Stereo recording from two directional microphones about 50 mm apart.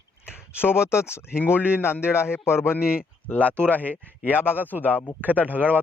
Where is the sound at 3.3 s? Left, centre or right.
Left.